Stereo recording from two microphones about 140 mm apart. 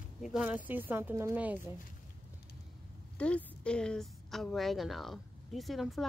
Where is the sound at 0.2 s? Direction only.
5° right (ahead or behind).